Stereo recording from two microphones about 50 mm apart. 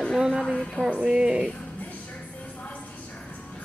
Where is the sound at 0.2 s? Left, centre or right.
Centre.